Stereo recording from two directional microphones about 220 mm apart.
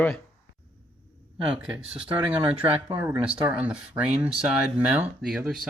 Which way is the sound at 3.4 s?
5° right (ahead or behind).